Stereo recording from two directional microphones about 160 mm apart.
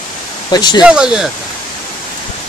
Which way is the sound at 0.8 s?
5° right (ahead or behind).